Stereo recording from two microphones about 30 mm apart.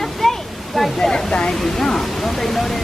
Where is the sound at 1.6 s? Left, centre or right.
Centre.